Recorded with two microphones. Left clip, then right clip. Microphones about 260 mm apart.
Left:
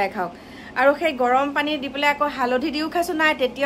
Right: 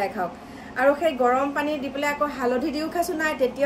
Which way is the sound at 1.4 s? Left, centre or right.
Centre.